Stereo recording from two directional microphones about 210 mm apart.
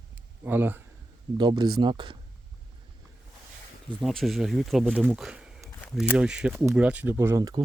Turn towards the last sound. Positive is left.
turn(degrees=-15)  # may be behind; listen again after turning